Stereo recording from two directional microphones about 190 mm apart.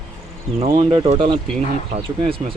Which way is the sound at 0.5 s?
25° right (ahead or behind).